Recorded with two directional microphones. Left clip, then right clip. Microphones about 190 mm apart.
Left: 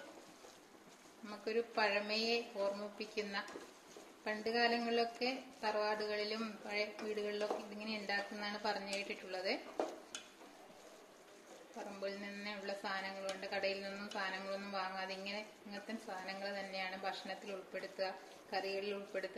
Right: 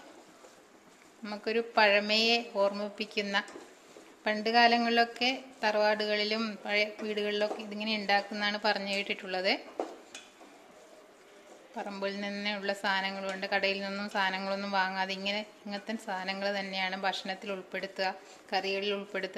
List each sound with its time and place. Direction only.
1.2 s a woman's voice: 50° right (ahead or behind)
12.0 s a woman's voice: 50° right (ahead or behind)